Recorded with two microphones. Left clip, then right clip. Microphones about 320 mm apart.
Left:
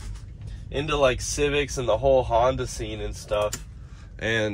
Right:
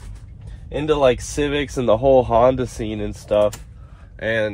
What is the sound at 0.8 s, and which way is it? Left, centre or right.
Speech, right.